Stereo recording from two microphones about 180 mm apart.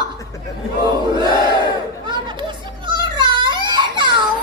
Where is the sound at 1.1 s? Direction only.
25° right (ahead or behind).